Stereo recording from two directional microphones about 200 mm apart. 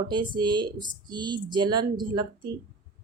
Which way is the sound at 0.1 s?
20° right (ahead or behind).